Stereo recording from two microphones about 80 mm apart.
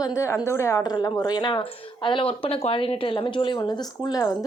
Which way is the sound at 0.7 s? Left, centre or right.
Left.